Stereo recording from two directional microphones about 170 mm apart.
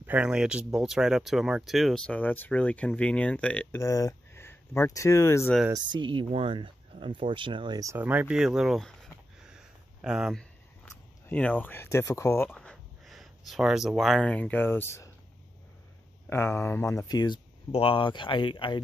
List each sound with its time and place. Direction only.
0.0 s speech: 10° right (ahead or behind); by 5.5 s 15° left (ahead or behind)
5.7 s speech: 25° right (ahead or behind); by 8.9 s centre (ahead or behind)
10.0 s speech: 5° right (ahead or behind)
10.9 s speech: 10° left (ahead or behind)
16.3 s speech: 15° left (ahead or behind)
17.6 s speech: 35° left (ahead or behind)